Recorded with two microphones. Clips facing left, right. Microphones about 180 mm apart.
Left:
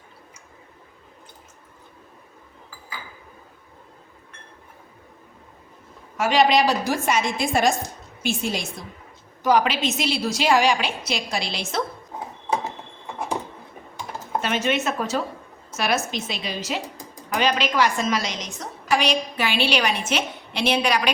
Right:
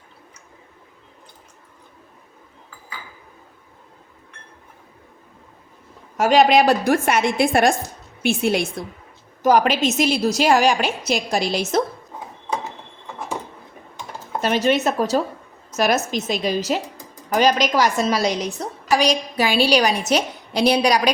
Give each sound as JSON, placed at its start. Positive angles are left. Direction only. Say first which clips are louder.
{"t": 6.1, "sound": "a woman's voice", "louder": "right 4 dB", "side_deg": -40}
{"t": 9.4, "sound": "a woman's voice", "louder": "right 4 dB", "side_deg": -45}
{"t": 14.4, "sound": "a woman's voice", "louder": "right 6 dB", "side_deg": -35}